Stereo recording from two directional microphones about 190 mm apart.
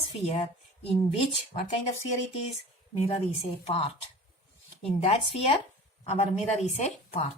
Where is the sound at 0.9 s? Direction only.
30° left (ahead or behind).